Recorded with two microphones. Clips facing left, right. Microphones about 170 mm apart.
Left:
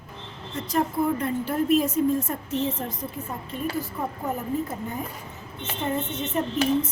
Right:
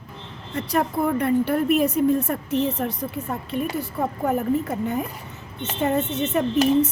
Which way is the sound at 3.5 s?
70° right (ahead or behind).